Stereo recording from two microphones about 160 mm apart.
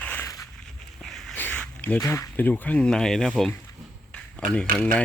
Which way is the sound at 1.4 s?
10° left (ahead or behind).